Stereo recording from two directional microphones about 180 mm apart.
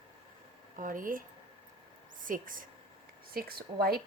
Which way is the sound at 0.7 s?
50° right (ahead or behind).